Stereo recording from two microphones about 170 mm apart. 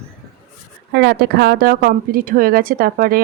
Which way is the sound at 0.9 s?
75° right (ahead or behind).